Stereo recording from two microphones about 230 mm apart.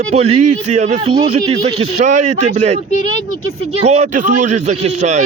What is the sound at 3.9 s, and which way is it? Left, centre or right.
A man's voice, right.